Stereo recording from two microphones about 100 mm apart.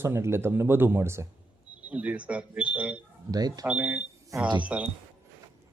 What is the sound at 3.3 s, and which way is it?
Speech, 40° right (ahead or behind).